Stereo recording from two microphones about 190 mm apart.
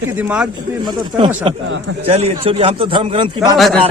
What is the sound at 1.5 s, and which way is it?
A man's voice, 30° right (ahead or behind).